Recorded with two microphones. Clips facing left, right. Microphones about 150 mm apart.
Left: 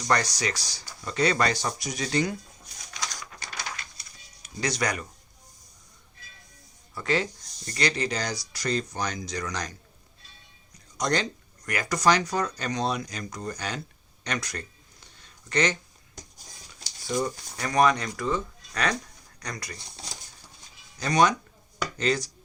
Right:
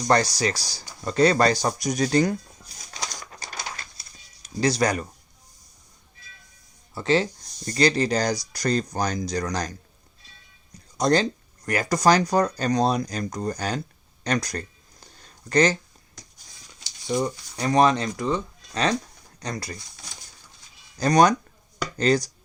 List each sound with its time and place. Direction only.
0.0 s speech: 35° right (ahead or behind)
3.4 s a sound: 35° right (ahead or behind)
4.4 s speech: 30° right (ahead or behind)
6.9 s speech: 30° right (ahead or behind)
10.9 s speech: 30° right (ahead or behind)
15.0 s a sound: 40° right (ahead or behind)
17.2 s speech: 20° right (ahead or behind)
21.0 s speech: 40° right (ahead or behind)